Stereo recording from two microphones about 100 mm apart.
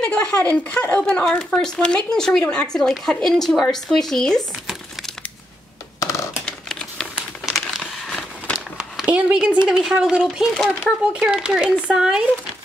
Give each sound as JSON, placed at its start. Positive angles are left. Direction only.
{"t": 0.0, "sound": "speech", "side_deg": 10}
{"t": 5.9, "sound": "a sound", "side_deg": 30}
{"t": 6.4, "sound": "typing", "side_deg": 5}
{"t": 7.2, "sound": "crumpling", "side_deg": -5}
{"t": 7.8, "sound": "a sound", "side_deg": 5}
{"t": 8.7, "sound": "speech", "side_deg": -5}